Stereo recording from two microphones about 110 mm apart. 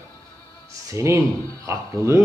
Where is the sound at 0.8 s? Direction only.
25° right (ahead or behind).